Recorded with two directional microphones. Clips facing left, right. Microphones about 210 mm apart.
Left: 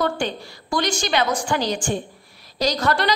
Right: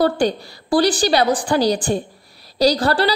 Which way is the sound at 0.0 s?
35° right (ahead or behind).